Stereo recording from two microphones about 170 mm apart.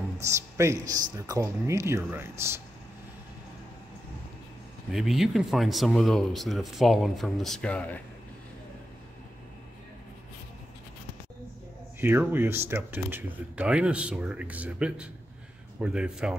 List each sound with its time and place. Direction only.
0.2 s speech: 15° right (ahead or behind)
4.9 s speech: centre (ahead or behind)
12.0 s speech: 10° right (ahead or behind)